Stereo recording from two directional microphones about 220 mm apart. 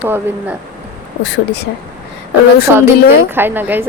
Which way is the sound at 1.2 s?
50° left (ahead or behind).